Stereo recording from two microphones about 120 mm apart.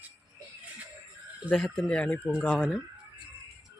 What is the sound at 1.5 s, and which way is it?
Speech, 10° left (ahead or behind).